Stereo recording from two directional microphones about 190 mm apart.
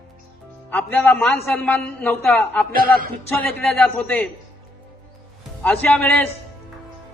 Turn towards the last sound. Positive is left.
turn(degrees=5)  # may be behind; listen again after turning